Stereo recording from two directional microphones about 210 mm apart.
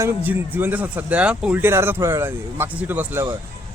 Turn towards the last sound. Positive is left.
turn(degrees=-10)  # may be behind; listen again after turning